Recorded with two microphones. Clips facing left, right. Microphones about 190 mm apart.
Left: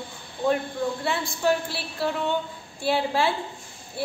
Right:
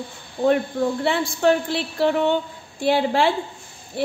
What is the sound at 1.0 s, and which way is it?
A woman's voice, 70° right (ahead or behind).